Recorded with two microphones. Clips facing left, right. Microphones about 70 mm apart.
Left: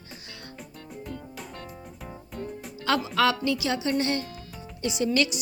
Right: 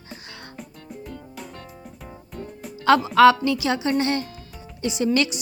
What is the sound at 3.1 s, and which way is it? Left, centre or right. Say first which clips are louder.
Speech: right 10 dB; right.